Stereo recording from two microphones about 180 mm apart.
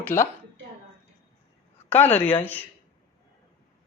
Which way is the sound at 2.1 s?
10° left (ahead or behind).